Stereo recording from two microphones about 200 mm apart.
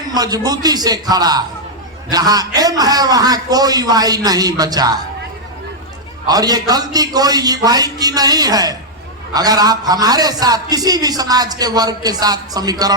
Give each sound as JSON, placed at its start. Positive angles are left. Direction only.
{"t": 0.1, "sound": "a man's voice", "side_deg": -20}
{"t": 6.2, "sound": "a man's voice", "side_deg": -20}